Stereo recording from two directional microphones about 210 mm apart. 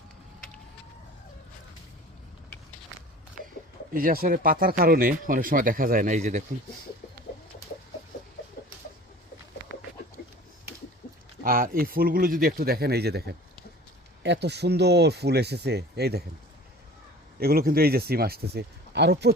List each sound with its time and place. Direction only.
3.9 s speech: 45° right (ahead or behind)
9.6 s bird: 60° right (ahead or behind)
11.4 s speech: 45° right (ahead or behind)
17.4 s speech: 45° right (ahead or behind)